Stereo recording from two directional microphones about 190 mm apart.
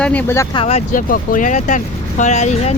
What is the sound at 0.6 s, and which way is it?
Speech, 35° left (ahead or behind).